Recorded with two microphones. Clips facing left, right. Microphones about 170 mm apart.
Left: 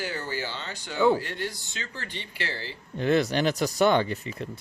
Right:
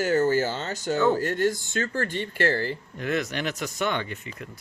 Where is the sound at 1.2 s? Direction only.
45° right (ahead or behind).